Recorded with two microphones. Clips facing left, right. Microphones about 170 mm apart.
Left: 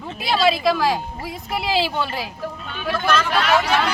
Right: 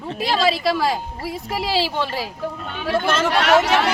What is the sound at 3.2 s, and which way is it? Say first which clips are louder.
Speech: right 3 dB; 75° right (ahead or behind).